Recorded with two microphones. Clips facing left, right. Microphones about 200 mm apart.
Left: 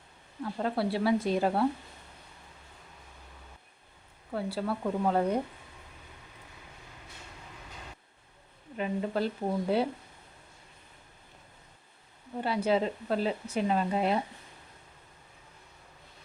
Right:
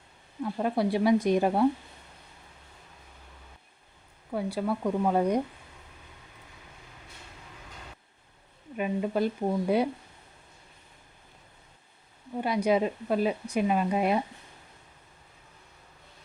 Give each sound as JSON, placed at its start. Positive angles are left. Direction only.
{"t": 0.4, "sound": "speech", "side_deg": -15}
{"t": 4.3, "sound": "speech", "side_deg": -15}
{"t": 8.8, "sound": "speech", "side_deg": -15}
{"t": 12.4, "sound": "speech", "side_deg": -15}